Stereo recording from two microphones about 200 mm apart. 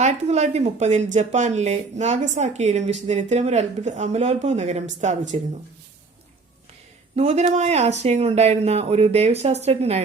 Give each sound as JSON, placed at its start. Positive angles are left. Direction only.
{"t": 0.0, "sound": "speech", "side_deg": -35}
{"t": 7.2, "sound": "speech", "side_deg": -35}